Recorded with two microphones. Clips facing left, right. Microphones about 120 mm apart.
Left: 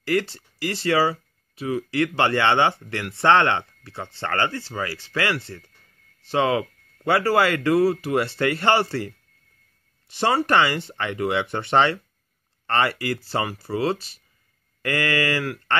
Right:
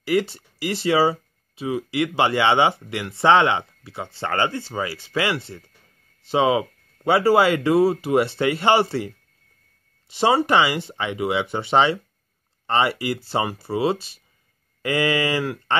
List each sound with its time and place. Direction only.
0.0 s speech: 15° right (ahead or behind)